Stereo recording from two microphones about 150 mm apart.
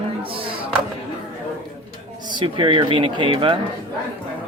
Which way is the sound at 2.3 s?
30° right (ahead or behind).